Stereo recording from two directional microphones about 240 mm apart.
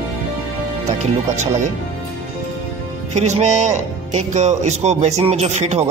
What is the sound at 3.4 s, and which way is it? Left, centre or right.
Speech, right.